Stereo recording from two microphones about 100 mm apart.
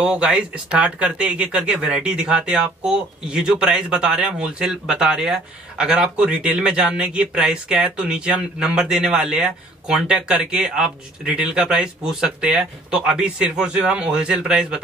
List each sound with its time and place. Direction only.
0.0 s speech: 10° right (ahead or behind)